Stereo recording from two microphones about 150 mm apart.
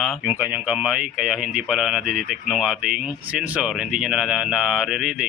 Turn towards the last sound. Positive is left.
turn(degrees=0)  # may be behind; listen again after turning